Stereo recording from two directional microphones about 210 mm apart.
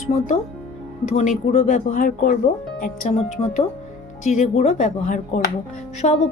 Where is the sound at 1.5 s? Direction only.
35° left (ahead or behind).